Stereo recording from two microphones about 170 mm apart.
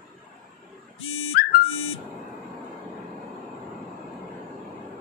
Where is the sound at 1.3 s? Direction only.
65° left (ahead or behind).